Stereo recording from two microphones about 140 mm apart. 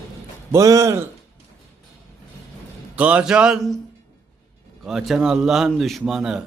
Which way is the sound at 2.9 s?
10° right (ahead or behind).